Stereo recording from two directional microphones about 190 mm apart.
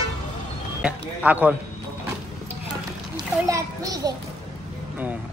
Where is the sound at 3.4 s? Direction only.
20° right (ahead or behind).